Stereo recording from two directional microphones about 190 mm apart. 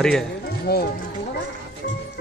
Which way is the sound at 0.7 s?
55° left (ahead or behind).